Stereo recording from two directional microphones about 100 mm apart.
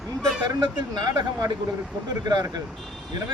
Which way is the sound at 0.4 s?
45° right (ahead or behind).